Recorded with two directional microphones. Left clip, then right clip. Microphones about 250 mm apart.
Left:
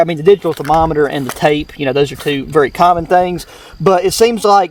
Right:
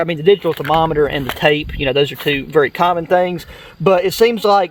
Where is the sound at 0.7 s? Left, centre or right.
Left.